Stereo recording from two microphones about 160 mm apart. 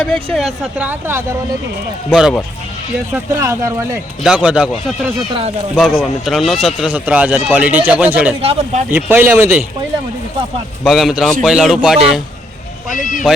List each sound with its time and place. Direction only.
0.3 s speech: centre (ahead or behind)
0.9 s speech: 15° right (ahead or behind)
3.1 s speech: 20° right (ahead or behind)
4.2 s speech: 5° right (ahead or behind)
5.3 s speech: 40° right (ahead or behind)
5.7 s speech: centre (ahead or behind)
8.4 s speech: 35° right (ahead or behind)
8.9 s speech: 10° right (ahead or behind)
10.8 s speech: centre (ahead or behind)
12.9 s speech: 55° left (ahead or behind)